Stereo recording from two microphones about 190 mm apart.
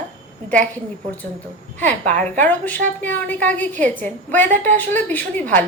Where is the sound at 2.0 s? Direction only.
40° right (ahead or behind).